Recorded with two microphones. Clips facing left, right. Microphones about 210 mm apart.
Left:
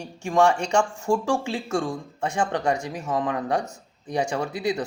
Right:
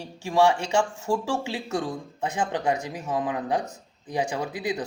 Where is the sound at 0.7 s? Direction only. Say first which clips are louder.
Left 2 dB; 5° right (ahead or behind).